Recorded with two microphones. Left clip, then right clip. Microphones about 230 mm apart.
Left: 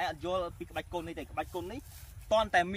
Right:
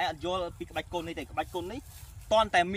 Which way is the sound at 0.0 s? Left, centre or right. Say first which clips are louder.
Right 2 dB; centre.